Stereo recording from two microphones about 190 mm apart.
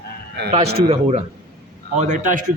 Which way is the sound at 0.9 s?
30° right (ahead or behind).